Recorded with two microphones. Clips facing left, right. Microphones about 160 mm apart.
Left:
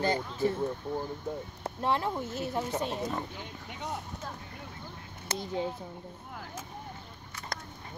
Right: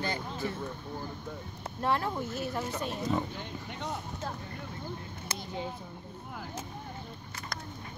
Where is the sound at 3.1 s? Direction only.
5° left (ahead or behind).